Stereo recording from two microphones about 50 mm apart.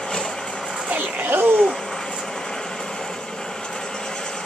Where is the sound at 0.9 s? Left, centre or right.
Right.